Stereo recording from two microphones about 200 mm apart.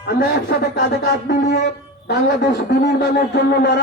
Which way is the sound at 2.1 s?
55° left (ahead or behind).